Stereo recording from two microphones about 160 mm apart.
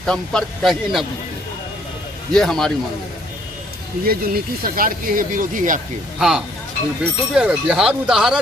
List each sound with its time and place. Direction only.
0.0 s a man's voice: 5° left (ahead or behind)
2.3 s a man's voice: 5° left (ahead or behind)
4.0 s speech: 70° right (ahead or behind)
6.1 s a man's voice: 5° right (ahead or behind)